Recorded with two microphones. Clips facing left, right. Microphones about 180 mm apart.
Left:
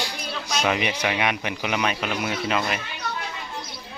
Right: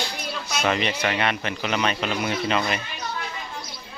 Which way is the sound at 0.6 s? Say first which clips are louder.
Right 1 dB; 10° left (ahead or behind).